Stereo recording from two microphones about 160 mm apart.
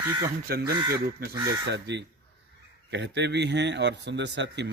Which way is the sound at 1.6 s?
90° right.